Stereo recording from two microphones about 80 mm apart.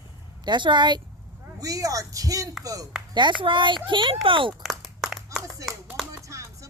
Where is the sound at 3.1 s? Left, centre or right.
Right.